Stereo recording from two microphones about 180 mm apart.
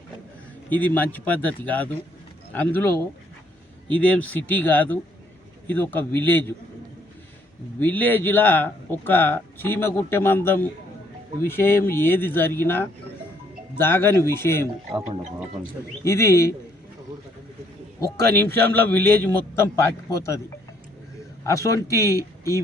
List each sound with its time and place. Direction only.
0.7 s speech: 10° left (ahead or behind)
7.8 s speech: 10° left (ahead or behind)
16.0 s speech: 15° left (ahead or behind)
18.7 s speech: 10° left (ahead or behind)
21.4 s speech: 15° left (ahead or behind)